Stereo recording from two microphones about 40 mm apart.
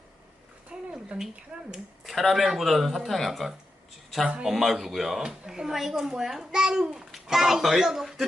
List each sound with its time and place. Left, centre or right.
0.7 s a sound: centre
1.5 s speech: right
2.0 s a child's voice: centre